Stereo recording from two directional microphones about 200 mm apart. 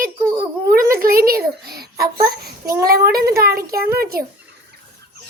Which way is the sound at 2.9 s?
50° right (ahead or behind).